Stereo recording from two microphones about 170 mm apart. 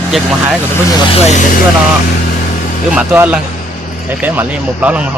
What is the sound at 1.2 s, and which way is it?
Speech, 45° left (ahead or behind).